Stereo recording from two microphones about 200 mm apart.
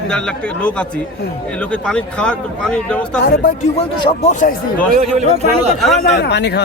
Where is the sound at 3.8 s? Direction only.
30° left (ahead or behind).